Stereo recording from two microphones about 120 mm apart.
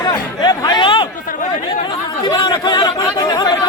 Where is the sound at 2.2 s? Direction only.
40° left (ahead or behind).